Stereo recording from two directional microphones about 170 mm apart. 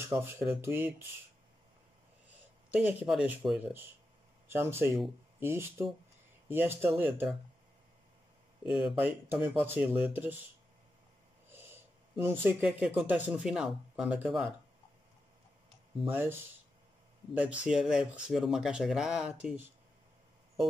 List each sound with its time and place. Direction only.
0.1 s speech: 15° right (ahead or behind)
2.7 s speech: 10° right (ahead or behind)
8.8 s speech: 5° right (ahead or behind)
11.5 s speech: 15° right (ahead or behind)
16.1 s speech: 10° right (ahead or behind)